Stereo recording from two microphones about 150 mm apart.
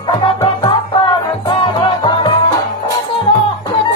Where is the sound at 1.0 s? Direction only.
30° left (ahead or behind).